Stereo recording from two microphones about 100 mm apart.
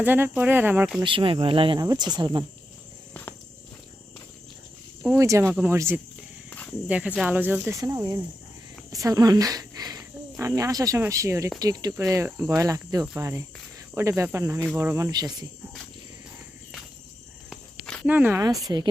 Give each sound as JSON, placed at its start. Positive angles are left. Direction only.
{"t": 0.0, "sound": "speech", "side_deg": -20}
{"t": 1.0, "sound": "speech", "side_deg": -60}
{"t": 1.8, "sound": "cricket", "side_deg": -40}
{"t": 2.1, "sound": "speech", "side_deg": -45}
{"t": 5.0, "sound": "speech", "side_deg": -30}
{"t": 10.4, "sound": "cricket", "side_deg": -35}
{"t": 13.9, "sound": "speech", "side_deg": -30}
{"t": 18.0, "sound": "speech", "side_deg": -20}
{"t": 18.4, "sound": "cricket", "side_deg": -40}